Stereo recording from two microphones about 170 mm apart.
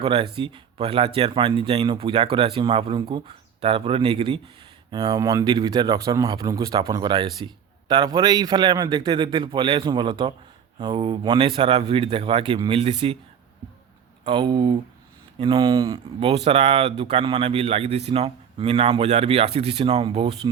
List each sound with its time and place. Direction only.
0.0 s speech: 30° right (ahead or behind)
14.3 s speech: 30° right (ahead or behind)